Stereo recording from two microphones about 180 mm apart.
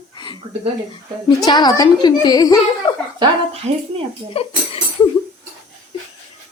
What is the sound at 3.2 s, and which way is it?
Speech, 35° right (ahead or behind).